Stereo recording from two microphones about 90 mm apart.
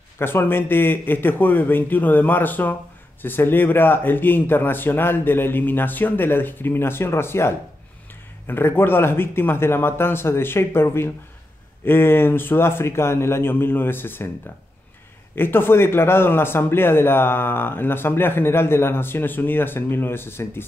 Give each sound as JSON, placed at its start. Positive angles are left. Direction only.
{"t": 0.2, "sound": "a man's voice", "side_deg": 25}
{"t": 15.3, "sound": "a man's voice", "side_deg": 25}